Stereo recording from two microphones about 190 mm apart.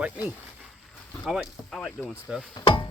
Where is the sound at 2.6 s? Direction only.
25° left (ahead or behind).